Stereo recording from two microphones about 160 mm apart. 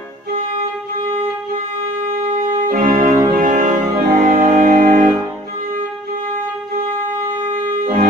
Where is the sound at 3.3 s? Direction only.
55° right (ahead or behind).